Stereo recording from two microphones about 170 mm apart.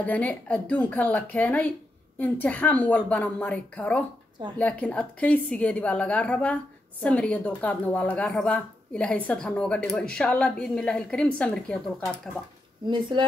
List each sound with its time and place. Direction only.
0.0 s a woman's voice: 10° left (ahead or behind)
12.8 s speech: 30° right (ahead or behind)